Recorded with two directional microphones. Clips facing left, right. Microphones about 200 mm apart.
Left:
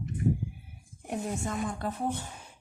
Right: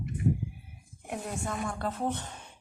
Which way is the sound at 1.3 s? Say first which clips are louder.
Left 1 dB; 20° left (ahead or behind).